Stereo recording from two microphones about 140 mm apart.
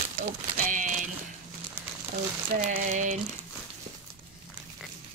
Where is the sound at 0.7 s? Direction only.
65° right (ahead or behind).